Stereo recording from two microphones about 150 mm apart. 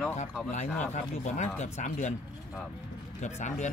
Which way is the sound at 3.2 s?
50° left (ahead or behind).